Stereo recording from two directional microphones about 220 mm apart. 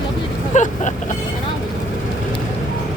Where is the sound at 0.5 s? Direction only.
35° left (ahead or behind).